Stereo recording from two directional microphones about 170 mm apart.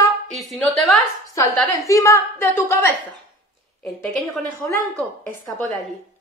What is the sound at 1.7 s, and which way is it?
A woman's voice, 20° left (ahead or behind).